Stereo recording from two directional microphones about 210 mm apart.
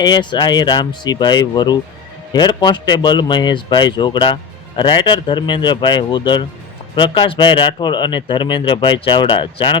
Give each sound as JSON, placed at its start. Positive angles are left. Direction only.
{"t": 0.0, "sound": "a man's voice", "side_deg": 20}